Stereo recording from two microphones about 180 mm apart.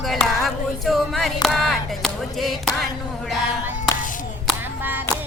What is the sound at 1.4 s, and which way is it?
Speech, centre (ahead or behind).